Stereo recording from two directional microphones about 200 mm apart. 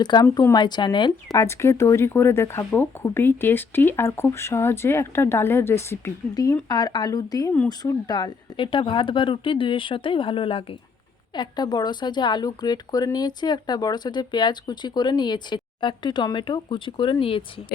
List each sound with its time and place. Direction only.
0.0 s speech: 20° left (ahead or behind)